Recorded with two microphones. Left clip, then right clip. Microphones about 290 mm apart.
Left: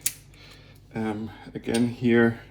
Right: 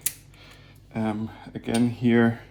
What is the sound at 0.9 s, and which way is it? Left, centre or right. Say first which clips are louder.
Speech: right 1 dB; right.